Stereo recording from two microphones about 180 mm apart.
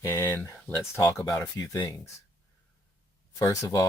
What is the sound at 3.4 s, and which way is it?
Speech, 15° left (ahead or behind).